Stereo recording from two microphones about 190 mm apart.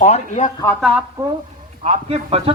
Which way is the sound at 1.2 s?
15° right (ahead or behind).